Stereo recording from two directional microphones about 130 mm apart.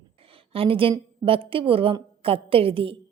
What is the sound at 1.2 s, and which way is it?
A woman's voice, 45° right (ahead or behind).